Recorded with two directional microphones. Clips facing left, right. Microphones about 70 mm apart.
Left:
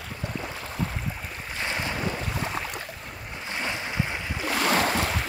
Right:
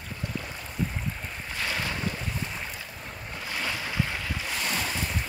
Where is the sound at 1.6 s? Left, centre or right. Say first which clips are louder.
Left 1 dB; left.